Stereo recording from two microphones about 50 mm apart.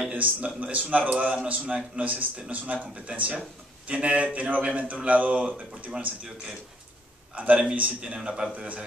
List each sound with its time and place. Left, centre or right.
0.1 s a man's voice: right
1.5 s a man's voice: right
7.3 s a man's voice: right